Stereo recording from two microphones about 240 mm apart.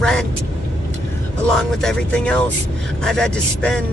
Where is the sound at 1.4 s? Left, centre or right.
Centre.